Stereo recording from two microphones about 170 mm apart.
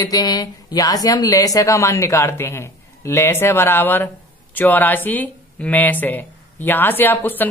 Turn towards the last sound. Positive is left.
turn(degrees=10)  # may be behind; listen again after turning